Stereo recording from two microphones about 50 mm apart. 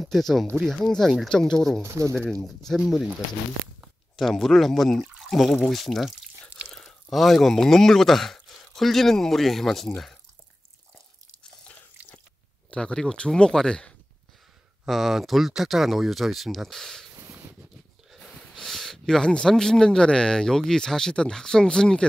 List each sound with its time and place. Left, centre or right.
0.0 s speech: centre
1.8 s speech: right
2.2 s speech: centre
4.2 s speech: centre
12.7 s speech: centre
14.9 s speech: centre
17.1 s a sound: right
18.1 s speech: centre